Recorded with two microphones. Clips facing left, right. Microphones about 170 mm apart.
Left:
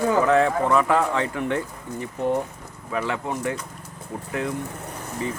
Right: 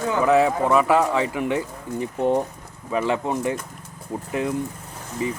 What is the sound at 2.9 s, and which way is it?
Speech, 20° right (ahead or behind).